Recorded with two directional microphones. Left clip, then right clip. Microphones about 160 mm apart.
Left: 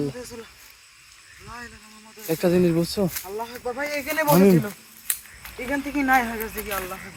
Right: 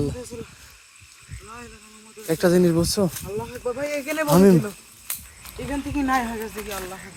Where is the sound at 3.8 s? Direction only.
20° left (ahead or behind).